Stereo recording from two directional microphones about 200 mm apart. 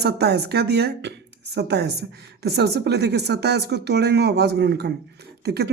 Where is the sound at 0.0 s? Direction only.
55° right (ahead or behind).